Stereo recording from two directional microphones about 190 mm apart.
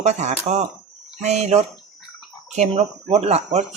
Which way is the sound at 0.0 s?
35° right (ahead or behind).